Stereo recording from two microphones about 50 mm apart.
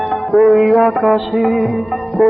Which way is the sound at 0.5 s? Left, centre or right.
Centre.